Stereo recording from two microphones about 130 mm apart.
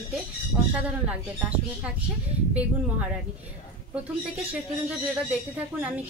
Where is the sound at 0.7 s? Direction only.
10° right (ahead or behind).